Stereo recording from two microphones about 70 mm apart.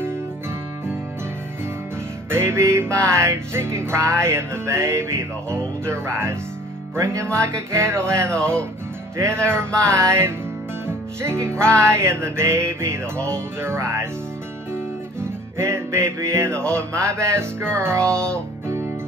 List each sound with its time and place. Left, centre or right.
2.3 s music: right
7.3 s music: right
15.1 s music: right